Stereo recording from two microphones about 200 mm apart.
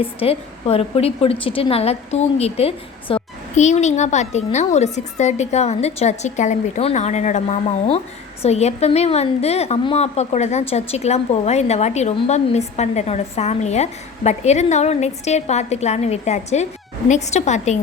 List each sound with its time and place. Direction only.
0.0 s a woman's voice: 30° left (ahead or behind)